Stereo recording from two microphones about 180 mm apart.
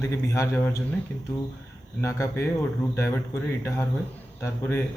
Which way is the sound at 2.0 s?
15° left (ahead or behind).